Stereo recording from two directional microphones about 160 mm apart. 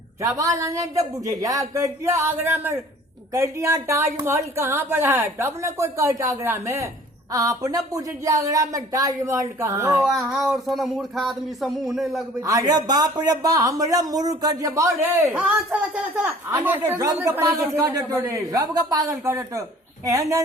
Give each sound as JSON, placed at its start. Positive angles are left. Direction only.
{"t": 0.2, "sound": "a woman's voice", "side_deg": -20}
{"t": 10.0, "sound": "a sound", "side_deg": 0}
{"t": 12.4, "sound": "speech", "side_deg": -20}